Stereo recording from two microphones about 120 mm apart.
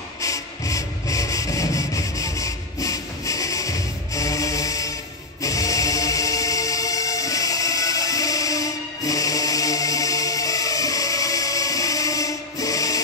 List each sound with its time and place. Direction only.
0.2 s rub: 25° left (ahead or behind)
5.4 s music: 30° left (ahead or behind)